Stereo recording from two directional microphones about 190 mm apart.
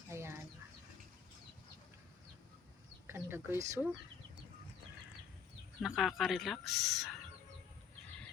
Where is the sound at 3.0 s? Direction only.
10° right (ahead or behind).